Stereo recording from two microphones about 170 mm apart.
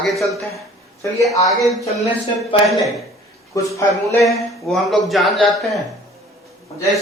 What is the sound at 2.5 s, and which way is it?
Speech, 30° left (ahead or behind).